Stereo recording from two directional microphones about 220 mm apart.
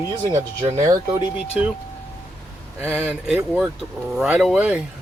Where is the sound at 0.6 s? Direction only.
25° right (ahead or behind).